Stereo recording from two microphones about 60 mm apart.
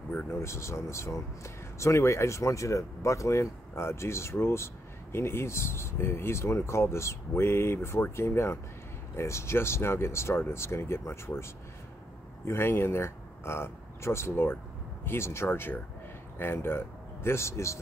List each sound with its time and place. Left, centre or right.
0.3 s speech: left
12.4 s speech: left